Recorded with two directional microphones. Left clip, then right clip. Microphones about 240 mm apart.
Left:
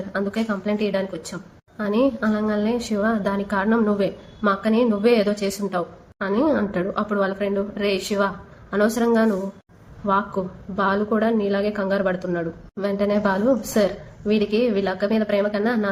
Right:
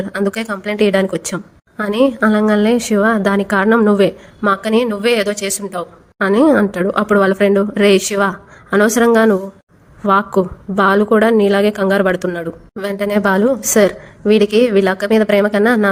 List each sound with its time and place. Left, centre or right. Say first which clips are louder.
0.1 s a woman's voice: right 3 dB; right